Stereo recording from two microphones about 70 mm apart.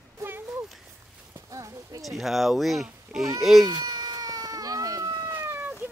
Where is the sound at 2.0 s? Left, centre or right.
Centre.